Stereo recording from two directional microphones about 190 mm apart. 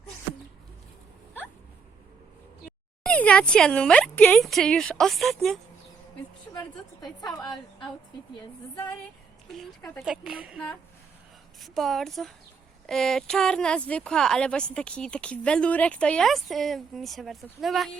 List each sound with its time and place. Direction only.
3.0 s speech: 5° left (ahead or behind)
6.5 s a woman's voice: 20° left (ahead or behind)
8.7 s speech: 20° left (ahead or behind)
9.5 s speech: centre (ahead or behind)
11.6 s speech: centre (ahead or behind)